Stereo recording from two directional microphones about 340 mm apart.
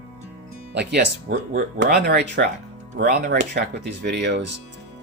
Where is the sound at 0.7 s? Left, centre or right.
Right.